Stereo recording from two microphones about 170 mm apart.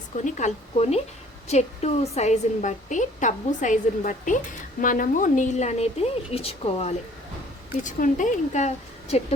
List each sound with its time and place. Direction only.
0.3 s a woman's voice: 45° left (ahead or behind)
7.9 s a woman's voice: 50° left (ahead or behind)